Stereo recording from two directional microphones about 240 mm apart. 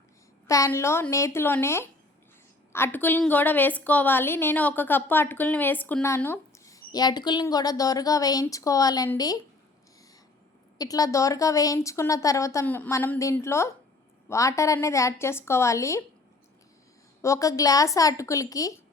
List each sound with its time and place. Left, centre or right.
0.4 s a woman's voice: centre
10.8 s a woman's voice: centre
17.2 s a woman's voice: centre